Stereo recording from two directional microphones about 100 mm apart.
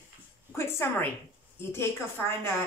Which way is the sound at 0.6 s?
25° left (ahead or behind).